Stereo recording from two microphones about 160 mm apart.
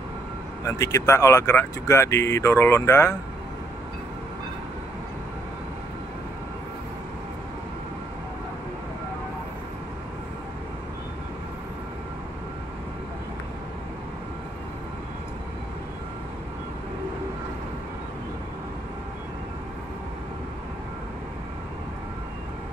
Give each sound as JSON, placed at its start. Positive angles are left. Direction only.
{"t": 0.7, "sound": "speech", "side_deg": 20}